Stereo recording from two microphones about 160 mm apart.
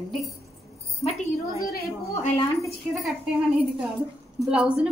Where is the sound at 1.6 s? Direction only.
70° left (ahead or behind).